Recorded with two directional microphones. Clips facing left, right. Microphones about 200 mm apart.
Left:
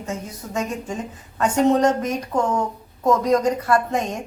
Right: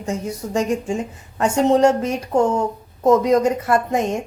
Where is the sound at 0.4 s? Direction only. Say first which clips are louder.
Right 6 dB; 25° right (ahead or behind).